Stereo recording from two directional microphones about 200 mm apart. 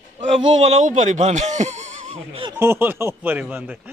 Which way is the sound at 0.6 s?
35° right (ahead or behind).